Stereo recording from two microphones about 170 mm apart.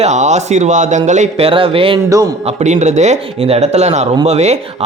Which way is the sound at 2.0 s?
20° right (ahead or behind).